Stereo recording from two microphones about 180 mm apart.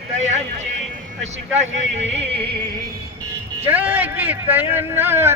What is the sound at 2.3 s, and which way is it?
Music, 30° right (ahead or behind).